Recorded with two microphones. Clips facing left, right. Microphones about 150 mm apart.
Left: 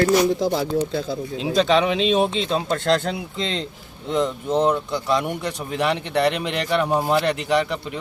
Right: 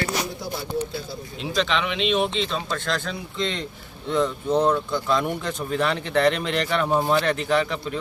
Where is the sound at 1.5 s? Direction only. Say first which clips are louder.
Left 6 dB; 40° left (ahead or behind).